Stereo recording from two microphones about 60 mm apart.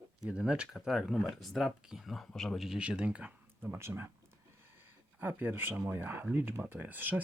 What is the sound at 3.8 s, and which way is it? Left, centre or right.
Speech, right.